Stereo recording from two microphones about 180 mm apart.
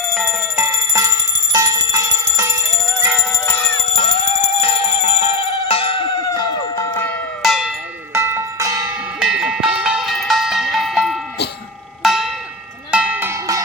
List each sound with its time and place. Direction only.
0.2 s bell: 15° right (ahead or behind)
1.5 s alarm clock: 20° right (ahead or behind)
3.0 s music: 5° right (ahead or behind)
4.3 s music: 40° left (ahead or behind); by 7.2 s 10° left (ahead or behind)
7.4 s a sound: 5° right (ahead or behind)
8.1 s tubular bells: 15° right (ahead or behind)
9.2 s music: 5° right (ahead or behind)
12.0 s zither: centre (ahead or behind)
12.9 s cowbell: 5° right (ahead or behind)